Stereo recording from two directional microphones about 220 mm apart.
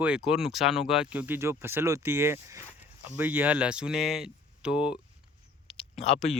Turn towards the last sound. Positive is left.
turn(degrees=30)  # may be behind; listen again after turning